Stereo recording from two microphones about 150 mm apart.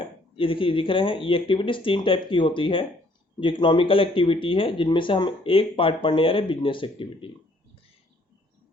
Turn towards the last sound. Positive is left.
turn(degrees=35)  # may be behind; listen again after turning